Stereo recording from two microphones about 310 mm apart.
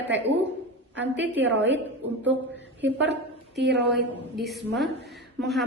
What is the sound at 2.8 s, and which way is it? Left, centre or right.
A woman's voice, right.